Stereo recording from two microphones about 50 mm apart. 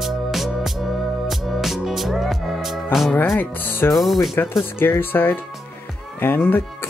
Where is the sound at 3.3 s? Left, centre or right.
Left.